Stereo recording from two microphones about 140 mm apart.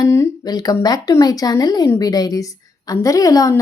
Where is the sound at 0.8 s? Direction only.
25° left (ahead or behind).